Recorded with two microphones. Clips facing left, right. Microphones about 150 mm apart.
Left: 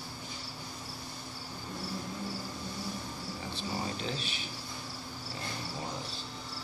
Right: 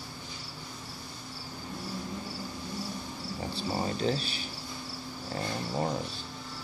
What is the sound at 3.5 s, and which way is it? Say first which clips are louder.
Speech: right 5 dB; 35° right (ahead or behind).